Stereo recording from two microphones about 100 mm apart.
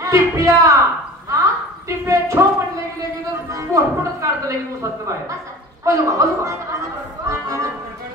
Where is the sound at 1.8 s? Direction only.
30° right (ahead or behind).